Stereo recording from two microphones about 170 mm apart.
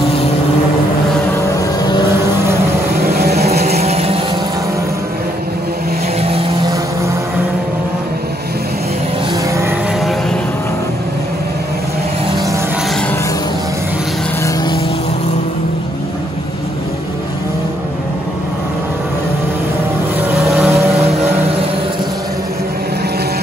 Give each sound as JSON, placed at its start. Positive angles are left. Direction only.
{"t": 3.2, "sound": "vehicle", "side_deg": -65}
{"t": 3.6, "sound": "a sound", "side_deg": -40}
{"t": 20.2, "sound": "vehicle", "side_deg": -10}